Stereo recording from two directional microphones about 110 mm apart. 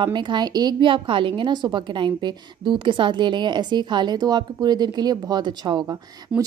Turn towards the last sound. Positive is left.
turn(degrees=-35)  # may be behind; listen again after turning